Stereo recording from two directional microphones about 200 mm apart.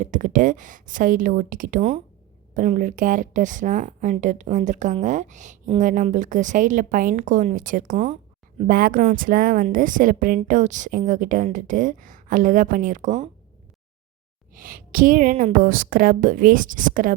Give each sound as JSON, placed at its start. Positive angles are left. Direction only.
{"t": 0.0, "sound": "a woman's voice", "side_deg": -40}
{"t": 14.5, "sound": "a woman's voice", "side_deg": -45}